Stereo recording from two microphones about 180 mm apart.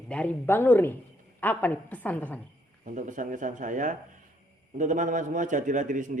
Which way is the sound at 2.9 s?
45° right (ahead or behind).